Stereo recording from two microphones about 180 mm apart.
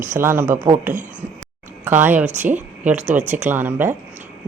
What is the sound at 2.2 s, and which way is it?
Speech, 40° right (ahead or behind).